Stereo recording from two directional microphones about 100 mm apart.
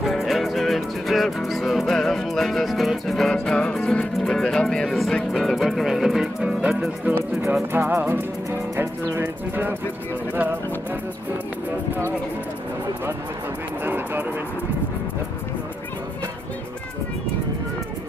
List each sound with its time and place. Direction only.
0.0 s music: centre (ahead or behind)
7.7 s music: 20° right (ahead or behind)
13.8 s a sound: 20° right (ahead or behind)